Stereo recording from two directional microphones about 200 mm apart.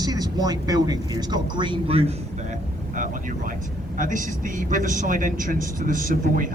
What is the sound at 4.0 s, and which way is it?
A man's voice, 40° right (ahead or behind).